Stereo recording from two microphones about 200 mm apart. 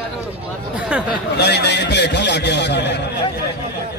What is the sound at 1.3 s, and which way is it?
Speech, 55° left (ahead or behind).